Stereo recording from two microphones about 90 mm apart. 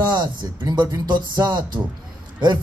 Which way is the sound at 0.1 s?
55° right (ahead or behind).